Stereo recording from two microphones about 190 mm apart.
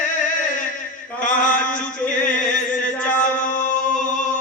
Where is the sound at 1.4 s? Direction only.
45° left (ahead or behind).